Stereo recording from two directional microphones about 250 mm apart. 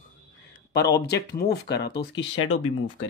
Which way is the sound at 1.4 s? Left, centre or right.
Left.